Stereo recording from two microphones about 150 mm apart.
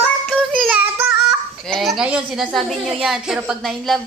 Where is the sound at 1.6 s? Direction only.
Centre (ahead or behind).